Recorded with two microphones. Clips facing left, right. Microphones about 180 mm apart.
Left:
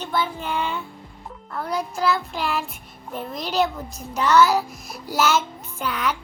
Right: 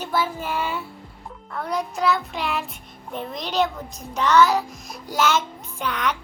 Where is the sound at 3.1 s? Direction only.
5° left (ahead or behind).